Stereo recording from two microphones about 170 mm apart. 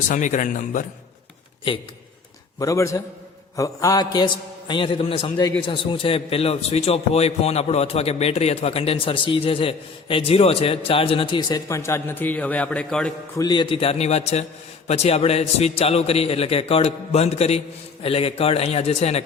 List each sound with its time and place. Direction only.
0.1 s a man's voice: 45° left (ahead or behind)
1.7 s a man's voice: 30° left (ahead or behind)
2.6 s mantra: 20° left (ahead or behind)
4.7 s a man's voice: 30° left (ahead or behind); by 13.1 s 5° left (ahead or behind)
13.3 s a man's voice: 25° left (ahead or behind); by 19.2 s 40° left (ahead or behind)